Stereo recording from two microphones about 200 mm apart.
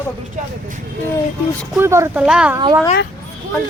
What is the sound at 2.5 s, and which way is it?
Speech, 20° right (ahead or behind).